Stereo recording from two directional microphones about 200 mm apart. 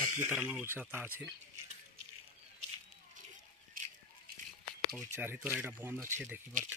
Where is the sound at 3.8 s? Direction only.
45° right (ahead or behind).